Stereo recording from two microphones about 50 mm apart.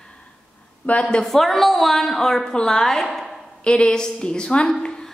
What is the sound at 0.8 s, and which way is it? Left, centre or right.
Speech, left.